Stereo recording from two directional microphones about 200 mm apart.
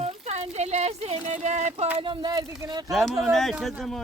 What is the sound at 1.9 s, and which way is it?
Speech, 25° right (ahead or behind).